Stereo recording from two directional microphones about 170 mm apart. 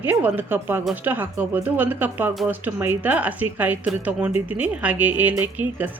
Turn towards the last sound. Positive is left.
turn(degrees=-10)  # may be behind; listen again after turning